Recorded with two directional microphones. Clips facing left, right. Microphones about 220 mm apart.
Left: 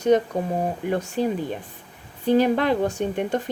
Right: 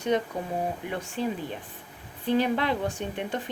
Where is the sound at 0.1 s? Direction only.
45° left (ahead or behind).